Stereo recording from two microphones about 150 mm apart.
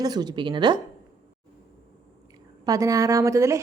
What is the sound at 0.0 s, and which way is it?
Speech, 25° right (ahead or behind).